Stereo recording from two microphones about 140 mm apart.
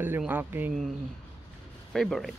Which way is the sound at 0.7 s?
Centre (ahead or behind).